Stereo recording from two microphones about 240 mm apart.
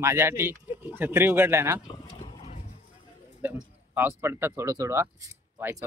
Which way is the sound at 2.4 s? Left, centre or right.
Left.